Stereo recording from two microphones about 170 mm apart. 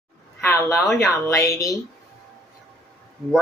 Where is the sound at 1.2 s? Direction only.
15° left (ahead or behind).